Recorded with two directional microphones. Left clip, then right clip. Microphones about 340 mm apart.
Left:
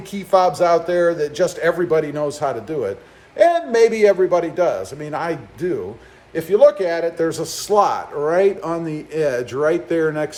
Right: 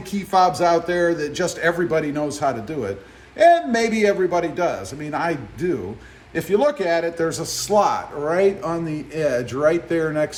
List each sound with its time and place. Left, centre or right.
0.1 s a man's voice: centre